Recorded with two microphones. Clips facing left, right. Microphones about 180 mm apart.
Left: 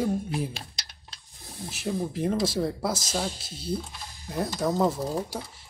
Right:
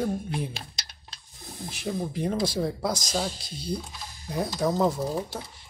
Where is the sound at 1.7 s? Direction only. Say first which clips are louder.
Left 1 dB; centre (ahead or behind).